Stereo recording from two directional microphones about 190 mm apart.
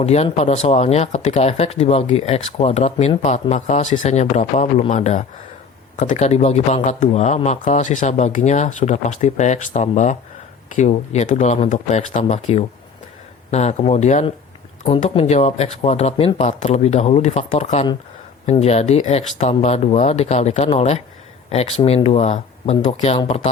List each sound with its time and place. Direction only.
0.0 s speech: 35° left (ahead or behind)